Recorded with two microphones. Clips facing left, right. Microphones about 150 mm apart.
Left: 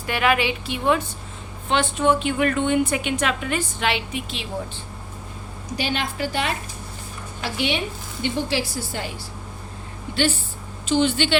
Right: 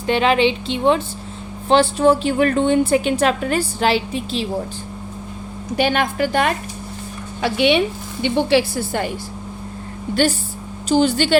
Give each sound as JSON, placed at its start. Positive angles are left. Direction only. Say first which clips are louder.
{"t": 0.1, "sound": "a woman's voice", "louder": "right 5 dB", "side_deg": -25}
{"t": 5.7, "sound": "a woman's voice", "louder": "right 8 dB", "side_deg": -55}
{"t": 7.4, "sound": "a woman's voice", "louder": "right 9 dB", "side_deg": -65}
{"t": 10.8, "sound": "a woman's voice", "louder": "right 4 dB", "side_deg": -40}